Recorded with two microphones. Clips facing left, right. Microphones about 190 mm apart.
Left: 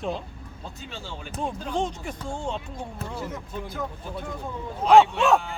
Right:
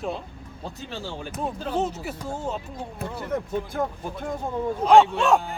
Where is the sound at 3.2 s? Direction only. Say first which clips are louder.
Right 7 dB; 55° right (ahead or behind).